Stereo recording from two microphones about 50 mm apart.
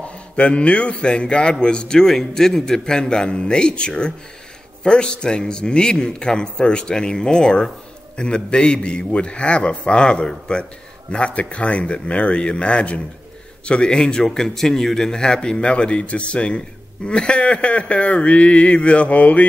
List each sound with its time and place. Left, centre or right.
0.0 s a man's voice: left